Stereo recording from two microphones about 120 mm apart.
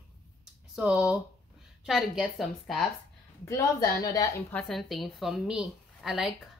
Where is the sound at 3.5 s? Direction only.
30° left (ahead or behind).